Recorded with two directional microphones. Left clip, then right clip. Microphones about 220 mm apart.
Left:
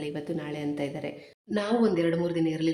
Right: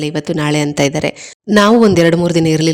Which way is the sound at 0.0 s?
45° right (ahead or behind).